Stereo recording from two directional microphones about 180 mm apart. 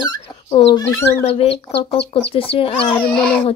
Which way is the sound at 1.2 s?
35° left (ahead or behind).